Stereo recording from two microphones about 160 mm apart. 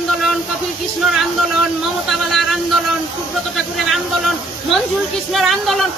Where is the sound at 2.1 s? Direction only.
Centre (ahead or behind).